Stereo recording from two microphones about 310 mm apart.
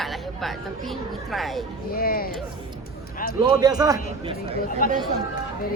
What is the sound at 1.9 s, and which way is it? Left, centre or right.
Speech, left.